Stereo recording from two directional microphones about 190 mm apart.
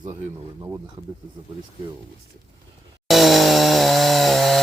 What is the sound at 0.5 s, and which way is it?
Speech, 15° right (ahead or behind).